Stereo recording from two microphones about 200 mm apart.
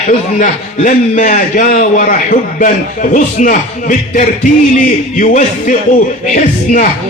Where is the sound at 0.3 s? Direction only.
40° left (ahead or behind).